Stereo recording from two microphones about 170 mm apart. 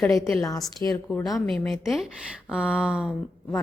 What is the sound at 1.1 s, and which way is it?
A woman's voice, centre (ahead or behind).